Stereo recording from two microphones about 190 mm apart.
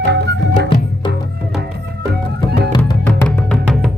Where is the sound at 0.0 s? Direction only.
65° right (ahead or behind).